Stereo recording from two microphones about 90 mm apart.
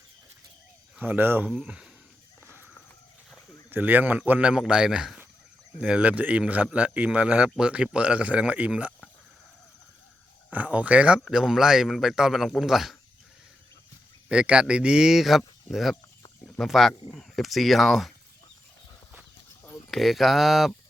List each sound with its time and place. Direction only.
0.9 s speech: 20° right (ahead or behind)
1.5 s speech: 10° right (ahead or behind)
3.7 s speech: 20° right (ahead or behind)
10.5 s speech: 15° right (ahead or behind)
14.3 s speech: 10° right (ahead or behind)
19.9 s speech: centre (ahead or behind)